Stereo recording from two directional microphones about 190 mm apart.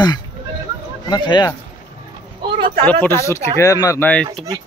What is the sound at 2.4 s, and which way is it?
Vehicle, 25° right (ahead or behind).